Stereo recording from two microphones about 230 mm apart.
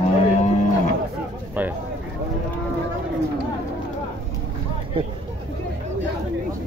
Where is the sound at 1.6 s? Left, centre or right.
Centre.